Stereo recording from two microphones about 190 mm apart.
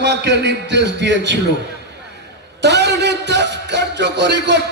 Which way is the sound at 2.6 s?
65° right (ahead or behind).